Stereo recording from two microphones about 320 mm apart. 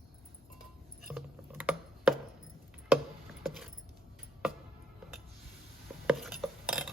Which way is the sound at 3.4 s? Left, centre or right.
Centre.